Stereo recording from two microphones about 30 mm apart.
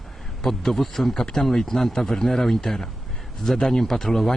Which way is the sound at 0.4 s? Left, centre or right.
Centre.